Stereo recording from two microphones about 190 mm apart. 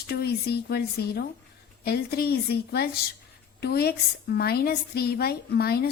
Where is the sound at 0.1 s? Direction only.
55° left (ahead or behind).